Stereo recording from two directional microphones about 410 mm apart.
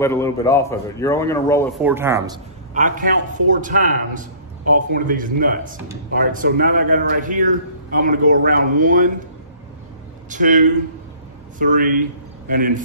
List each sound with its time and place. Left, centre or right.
0.0 s speech: centre
2.7 s a man's voice: centre
10.3 s a man's voice: centre